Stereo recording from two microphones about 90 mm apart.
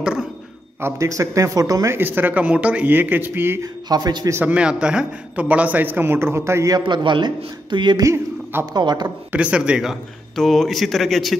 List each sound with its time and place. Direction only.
0.0 s a sound: 10° right (ahead or behind)
0.7 s speech: 30° right (ahead or behind)
1.9 s a man's voice: 25° right (ahead or behind)
3.9 s a man's voice: 45° right (ahead or behind)
4.4 s a man's voice: 15° right (ahead or behind)
6.8 s a man's voice: 60° right (ahead or behind)
8.0 s a man's voice: 30° right (ahead or behind)
8.7 s a man's voice: 55° right (ahead or behind)
9.3 s speech: 15° right (ahead or behind)
10.3 s a man's voice: 5° left (ahead or behind)